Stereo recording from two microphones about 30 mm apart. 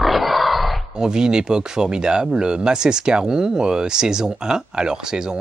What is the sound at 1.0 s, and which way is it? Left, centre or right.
Speech, right.